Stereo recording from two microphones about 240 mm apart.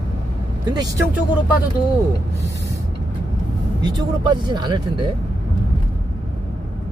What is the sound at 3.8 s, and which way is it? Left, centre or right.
Speech, centre.